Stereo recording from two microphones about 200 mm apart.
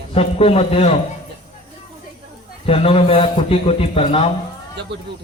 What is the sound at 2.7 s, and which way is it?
A man's voice, 30° left (ahead or behind).